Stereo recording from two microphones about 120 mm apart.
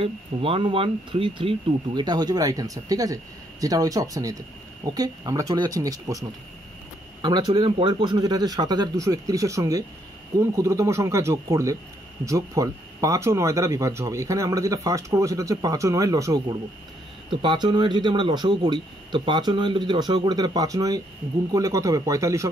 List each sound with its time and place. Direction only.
0.0 s speech: 50° right (ahead or behind); by 22.5 s 25° right (ahead or behind)